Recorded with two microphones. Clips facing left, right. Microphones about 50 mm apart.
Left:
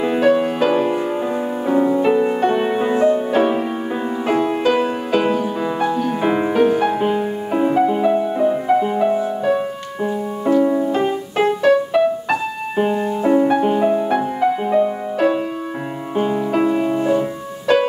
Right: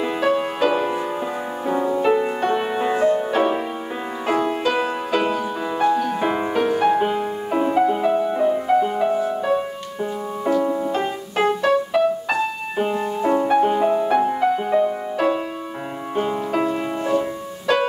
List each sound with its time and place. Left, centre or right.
0.0 s music: centre
10.5 s music: centre
10.8 s music: centre